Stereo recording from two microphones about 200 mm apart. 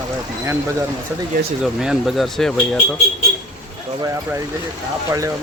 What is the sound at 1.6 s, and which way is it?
Speech, 5° right (ahead or behind).